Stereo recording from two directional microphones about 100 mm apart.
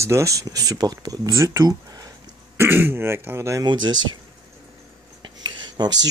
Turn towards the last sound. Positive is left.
turn(degrees=-45)  # may be behind; listen again after turning